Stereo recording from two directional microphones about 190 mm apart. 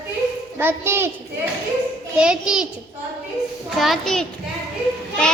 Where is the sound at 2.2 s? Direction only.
5° right (ahead or behind).